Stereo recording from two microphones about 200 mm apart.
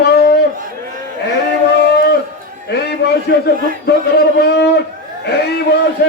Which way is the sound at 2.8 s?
55° left (ahead or behind).